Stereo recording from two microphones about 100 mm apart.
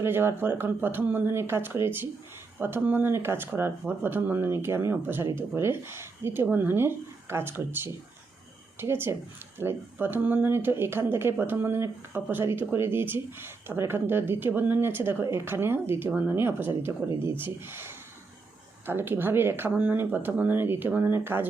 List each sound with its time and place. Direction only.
0.0 s speech: 25° right (ahead or behind)